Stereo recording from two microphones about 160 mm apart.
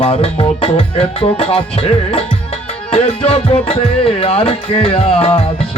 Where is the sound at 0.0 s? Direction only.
35° left (ahead or behind).